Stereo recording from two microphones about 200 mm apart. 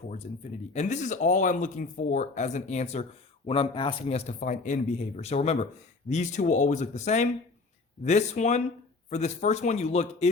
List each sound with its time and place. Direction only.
0.7 s speech: 35° left (ahead or behind)
4.3 s speech: 40° left (ahead or behind)